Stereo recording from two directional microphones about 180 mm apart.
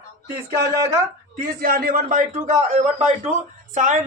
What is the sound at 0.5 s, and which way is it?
Speech, 15° right (ahead or behind).